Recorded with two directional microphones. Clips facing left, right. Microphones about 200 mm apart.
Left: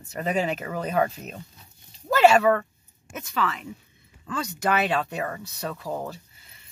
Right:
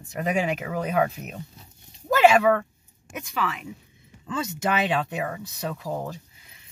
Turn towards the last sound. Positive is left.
turn(degrees=-15)  # may be behind; listen again after turning